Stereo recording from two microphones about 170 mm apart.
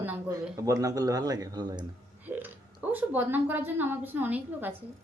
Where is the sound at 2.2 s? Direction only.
10° right (ahead or behind).